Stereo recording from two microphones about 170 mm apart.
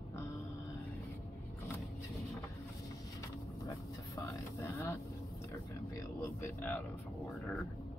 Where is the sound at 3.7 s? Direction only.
20° left (ahead or behind).